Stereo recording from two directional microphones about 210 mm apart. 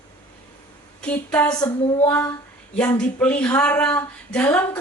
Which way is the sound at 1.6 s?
20° left (ahead or behind).